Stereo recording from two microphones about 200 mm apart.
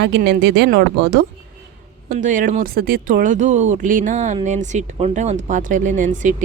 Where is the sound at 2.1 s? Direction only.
40° right (ahead or behind).